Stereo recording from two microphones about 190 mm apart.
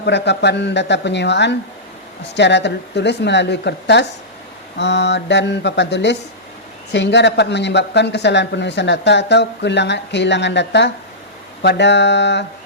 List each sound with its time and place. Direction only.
0.0 s speech: 65° left (ahead or behind)